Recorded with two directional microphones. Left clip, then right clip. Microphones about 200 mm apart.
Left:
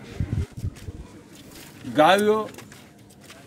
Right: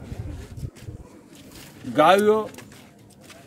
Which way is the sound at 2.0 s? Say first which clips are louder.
Right 1 dB; 5° right (ahead or behind).